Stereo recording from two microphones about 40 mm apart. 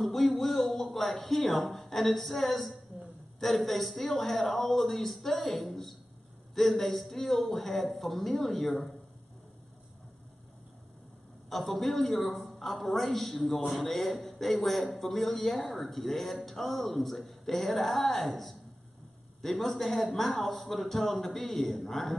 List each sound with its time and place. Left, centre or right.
0.0 s a man's voice: centre
11.4 s a man's voice: centre